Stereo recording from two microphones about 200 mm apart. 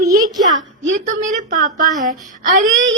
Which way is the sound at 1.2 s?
40° right (ahead or behind).